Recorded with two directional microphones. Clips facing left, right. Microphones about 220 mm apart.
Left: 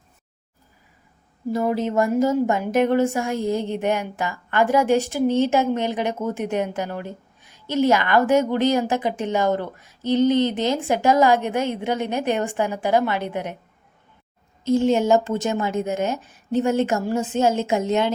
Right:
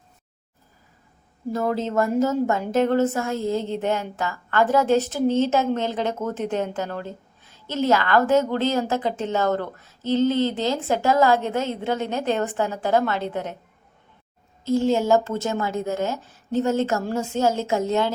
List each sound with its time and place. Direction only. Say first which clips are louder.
1.5 s a woman's voice: left 2 dB; 15° left (ahead or behind)
14.6 s speech: left 2 dB; 20° left (ahead or behind)